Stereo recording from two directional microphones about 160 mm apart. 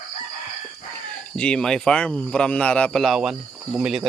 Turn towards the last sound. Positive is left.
turn(degrees=-5)  # may be behind; listen again after turning